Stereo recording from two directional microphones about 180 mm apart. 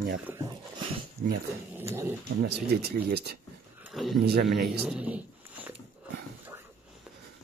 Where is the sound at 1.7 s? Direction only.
15° right (ahead or behind).